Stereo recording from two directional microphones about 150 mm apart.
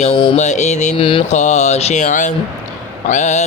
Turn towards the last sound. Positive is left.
turn(degrees=50)  # may be behind; listen again after turning